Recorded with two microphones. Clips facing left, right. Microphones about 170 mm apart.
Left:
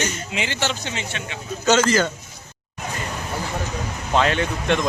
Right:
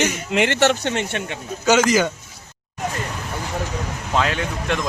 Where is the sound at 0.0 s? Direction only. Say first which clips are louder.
Right 7 dB; 75° right (ahead or behind); by 1.4 s 55° right (ahead or behind).